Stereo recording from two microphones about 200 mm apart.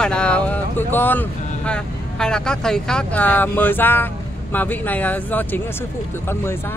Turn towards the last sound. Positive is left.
turn(degrees=10)  # may be behind; listen again after turning